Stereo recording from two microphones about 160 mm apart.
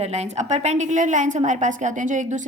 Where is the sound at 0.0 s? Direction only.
45° right (ahead or behind).